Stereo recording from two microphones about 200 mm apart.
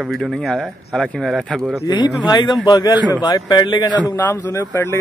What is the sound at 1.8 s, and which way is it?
Speech, 20° left (ahead or behind).